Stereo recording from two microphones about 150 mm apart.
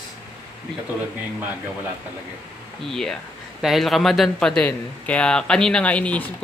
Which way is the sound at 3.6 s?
Centre (ahead or behind).